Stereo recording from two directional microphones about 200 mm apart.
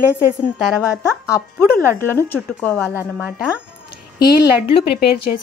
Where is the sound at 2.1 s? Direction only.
10° left (ahead or behind).